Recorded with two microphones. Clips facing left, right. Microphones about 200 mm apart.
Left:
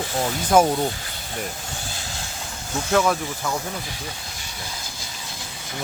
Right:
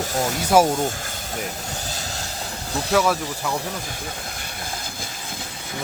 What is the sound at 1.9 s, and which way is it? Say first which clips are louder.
Vehicle: right 3 dB; 40° right (ahead or behind).